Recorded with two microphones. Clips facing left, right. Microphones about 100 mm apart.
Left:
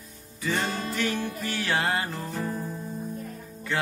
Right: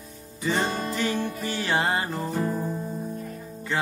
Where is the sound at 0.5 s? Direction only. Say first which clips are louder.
Right 2 dB; 20° right (ahead or behind).